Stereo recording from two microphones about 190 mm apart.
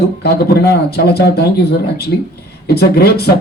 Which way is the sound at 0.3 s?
55° left (ahead or behind).